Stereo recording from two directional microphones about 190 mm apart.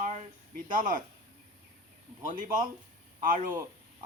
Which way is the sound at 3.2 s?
45° right (ahead or behind).